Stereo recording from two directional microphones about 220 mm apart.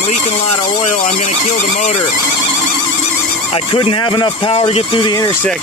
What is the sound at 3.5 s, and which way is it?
Speech, 25° left (ahead or behind).